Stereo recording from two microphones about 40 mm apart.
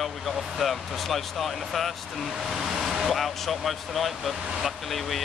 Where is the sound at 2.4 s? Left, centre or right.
Centre.